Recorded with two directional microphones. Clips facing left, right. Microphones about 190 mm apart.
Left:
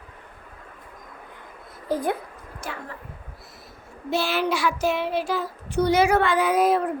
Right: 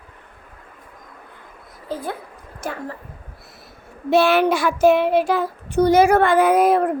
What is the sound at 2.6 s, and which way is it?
Speech, 45° right (ahead or behind).